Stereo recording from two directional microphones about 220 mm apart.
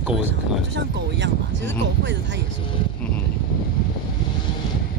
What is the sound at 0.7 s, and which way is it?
Speech, 55° right (ahead or behind).